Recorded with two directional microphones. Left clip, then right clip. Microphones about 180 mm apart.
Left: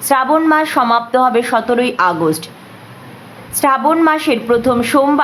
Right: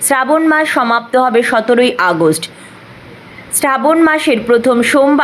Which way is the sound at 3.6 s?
15° right (ahead or behind).